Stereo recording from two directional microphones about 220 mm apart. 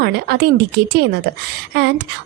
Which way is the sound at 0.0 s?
50° right (ahead or behind).